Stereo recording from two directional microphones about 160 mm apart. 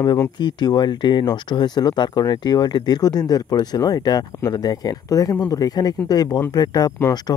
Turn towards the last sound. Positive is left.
turn(degrees=20)  # may be behind; listen again after turning